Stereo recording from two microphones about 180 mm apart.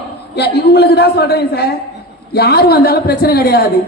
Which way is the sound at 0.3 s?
65° left (ahead or behind).